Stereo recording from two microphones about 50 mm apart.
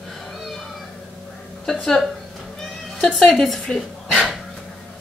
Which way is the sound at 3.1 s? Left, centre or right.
Centre.